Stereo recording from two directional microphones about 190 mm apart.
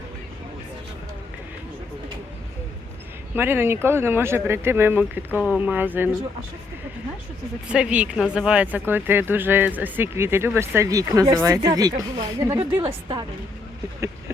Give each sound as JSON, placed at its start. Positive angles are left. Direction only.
{"t": 3.3, "sound": "speech", "side_deg": -10}
{"t": 7.7, "sound": "speech", "side_deg": -5}
{"t": 12.7, "sound": "a woman's voice", "side_deg": -30}